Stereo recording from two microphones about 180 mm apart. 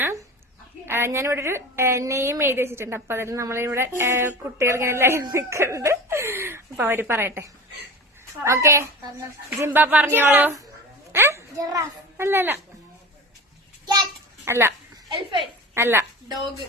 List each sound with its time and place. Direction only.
0.9 s a woman's voice: 15° right (ahead or behind)
13.8 s a sound: 20° right (ahead or behind)
15.7 s a woman's voice: 15° right (ahead or behind)